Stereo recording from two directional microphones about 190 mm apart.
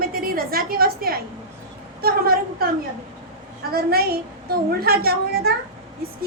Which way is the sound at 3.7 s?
55° right (ahead or behind).